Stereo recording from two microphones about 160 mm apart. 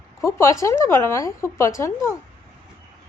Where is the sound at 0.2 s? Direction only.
15° left (ahead or behind).